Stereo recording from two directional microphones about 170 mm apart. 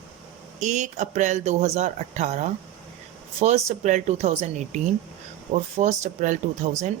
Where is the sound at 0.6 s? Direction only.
45° right (ahead or behind).